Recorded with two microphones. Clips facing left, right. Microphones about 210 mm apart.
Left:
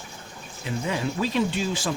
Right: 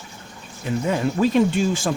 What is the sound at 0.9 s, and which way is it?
Speech, 50° right (ahead or behind).